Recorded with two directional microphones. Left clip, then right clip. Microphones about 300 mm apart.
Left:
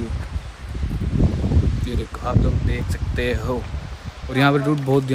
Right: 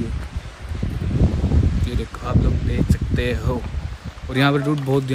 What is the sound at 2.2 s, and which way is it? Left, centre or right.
Speech, centre.